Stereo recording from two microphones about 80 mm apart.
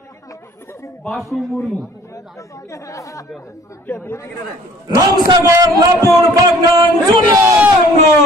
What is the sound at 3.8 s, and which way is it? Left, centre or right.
Speech, left.